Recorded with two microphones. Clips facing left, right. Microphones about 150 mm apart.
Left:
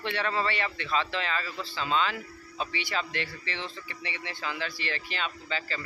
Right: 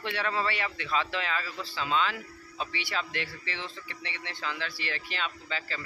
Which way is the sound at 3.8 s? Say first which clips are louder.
Left 2 dB; 10° left (ahead or behind).